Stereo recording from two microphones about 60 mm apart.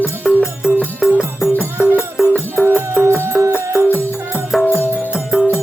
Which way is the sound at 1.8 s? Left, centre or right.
Right.